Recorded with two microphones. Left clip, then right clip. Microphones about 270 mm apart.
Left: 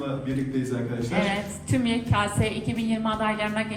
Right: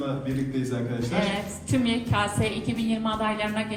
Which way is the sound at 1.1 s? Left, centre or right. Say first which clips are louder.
Left 2 dB; left.